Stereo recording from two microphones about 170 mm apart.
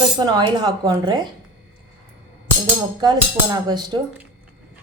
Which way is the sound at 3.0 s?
25° right (ahead or behind).